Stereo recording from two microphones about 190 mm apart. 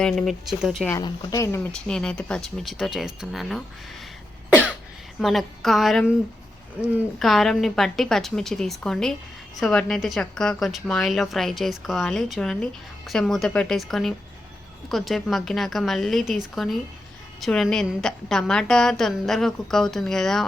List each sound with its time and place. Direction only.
0.0 s a woman's voice: centre (ahead or behind)
0.9 s speech: 20° left (ahead or behind)
1.9 s a woman's voice: 5° left (ahead or behind)
5.2 s a woman's voice: centre (ahead or behind)
17.4 s a woman's voice: 5° left (ahead or behind)